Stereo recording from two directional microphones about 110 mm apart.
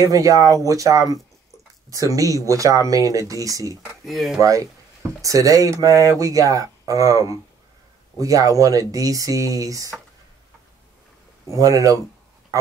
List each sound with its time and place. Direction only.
0.0 s speech: 30° right (ahead or behind)
4.0 s speech: centre (ahead or behind)
4.4 s speech: 30° right (ahead or behind)
11.4 s speech: 30° right (ahead or behind)